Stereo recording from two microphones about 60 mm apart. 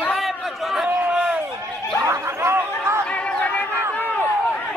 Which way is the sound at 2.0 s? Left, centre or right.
Right.